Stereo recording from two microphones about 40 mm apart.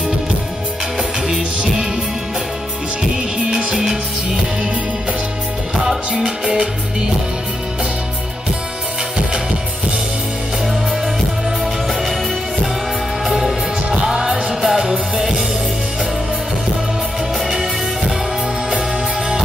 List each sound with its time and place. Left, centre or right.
1.3 s music: right
3.5 s music: centre
5.9 s music: centre
13.3 s music: centre
17.5 s music: right